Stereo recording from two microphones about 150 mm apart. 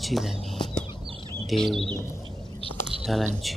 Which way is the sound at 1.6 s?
Centre (ahead or behind).